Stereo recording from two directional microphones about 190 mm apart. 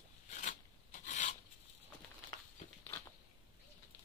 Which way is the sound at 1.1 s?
40° left (ahead or behind).